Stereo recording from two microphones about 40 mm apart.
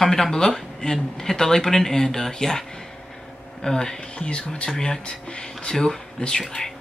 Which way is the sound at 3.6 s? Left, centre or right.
Centre.